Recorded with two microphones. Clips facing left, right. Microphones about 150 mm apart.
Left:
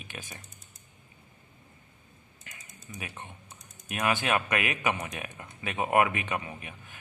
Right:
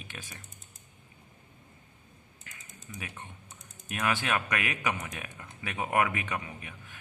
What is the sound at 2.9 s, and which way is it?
Speech, 25° left (ahead or behind).